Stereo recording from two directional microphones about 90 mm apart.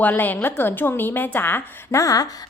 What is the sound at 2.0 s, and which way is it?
Speech, 40° left (ahead or behind).